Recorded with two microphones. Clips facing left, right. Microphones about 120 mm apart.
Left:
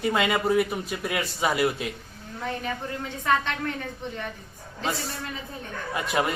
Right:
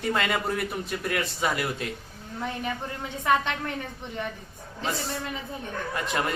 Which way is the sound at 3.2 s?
15° right (ahead or behind).